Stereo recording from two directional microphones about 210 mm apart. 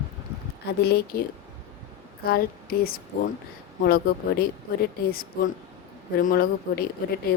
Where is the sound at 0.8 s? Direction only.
50° left (ahead or behind).